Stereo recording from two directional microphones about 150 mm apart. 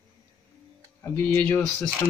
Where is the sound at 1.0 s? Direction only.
10° left (ahead or behind).